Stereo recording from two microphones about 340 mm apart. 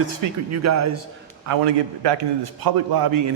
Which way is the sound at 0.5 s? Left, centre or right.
Right.